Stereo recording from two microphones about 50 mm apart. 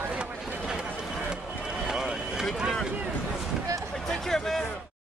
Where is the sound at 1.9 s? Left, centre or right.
Centre.